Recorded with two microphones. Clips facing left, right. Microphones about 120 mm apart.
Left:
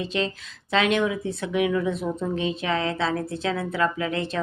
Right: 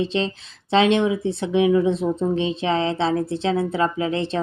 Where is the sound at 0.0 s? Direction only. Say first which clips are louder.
Right 4 dB; 30° right (ahead or behind).